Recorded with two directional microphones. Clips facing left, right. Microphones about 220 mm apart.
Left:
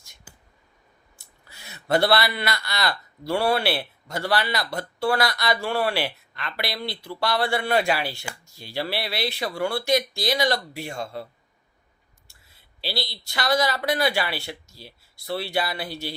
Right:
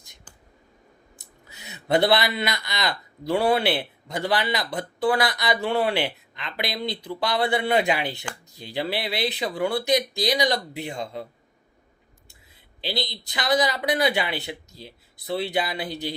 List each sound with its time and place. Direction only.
0.3 s a sound: 10° left (ahead or behind)
1.2 s speech: 20° right (ahead or behind)
12.5 s speech: 20° right (ahead or behind)